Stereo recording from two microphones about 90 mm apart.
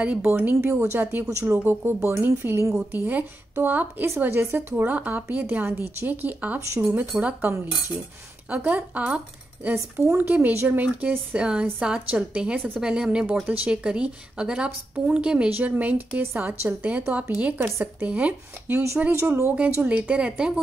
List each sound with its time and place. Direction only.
0.0 s a woman's voice: 15° right (ahead or behind)
19.1 s a woman's voice: 30° right (ahead or behind)
19.8 s a woman's voice: 15° right (ahead or behind)